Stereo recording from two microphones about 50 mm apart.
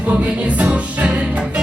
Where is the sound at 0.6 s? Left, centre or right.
Right.